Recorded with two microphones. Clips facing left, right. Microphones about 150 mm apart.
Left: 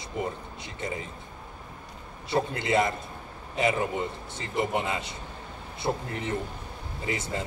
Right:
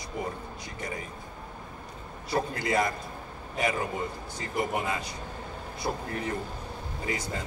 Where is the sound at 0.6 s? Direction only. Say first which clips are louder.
Left 2 dB; 25° left (ahead or behind).